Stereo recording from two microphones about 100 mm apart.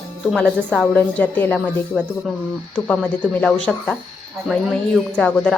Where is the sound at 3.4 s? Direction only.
10° left (ahead or behind).